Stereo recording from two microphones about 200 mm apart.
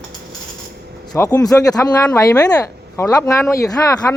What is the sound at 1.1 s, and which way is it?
Speech, 20° left (ahead or behind).